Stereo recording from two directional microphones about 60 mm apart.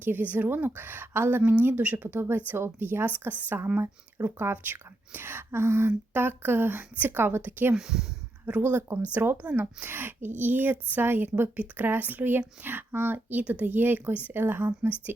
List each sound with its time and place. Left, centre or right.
0.0 s speech: right
7.8 s speech: centre
8.4 s speech: right